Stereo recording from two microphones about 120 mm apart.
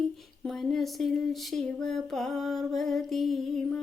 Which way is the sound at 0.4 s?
5° left (ahead or behind).